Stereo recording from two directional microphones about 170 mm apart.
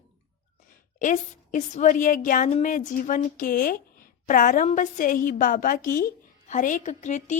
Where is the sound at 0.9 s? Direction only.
50° left (ahead or behind).